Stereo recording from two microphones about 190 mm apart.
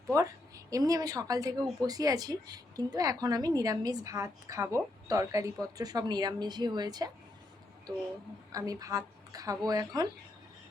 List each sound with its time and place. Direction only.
0.1 s a woman's voice: 15° right (ahead or behind)
8.5 s a woman's voice: 20° right (ahead or behind)